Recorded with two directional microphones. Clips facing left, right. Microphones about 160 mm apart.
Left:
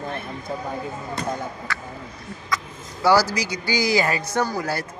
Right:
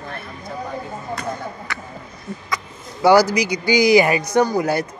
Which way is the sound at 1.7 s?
20° right (ahead or behind).